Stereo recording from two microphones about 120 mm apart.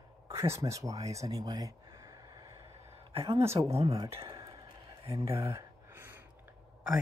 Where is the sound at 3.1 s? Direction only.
55° right (ahead or behind).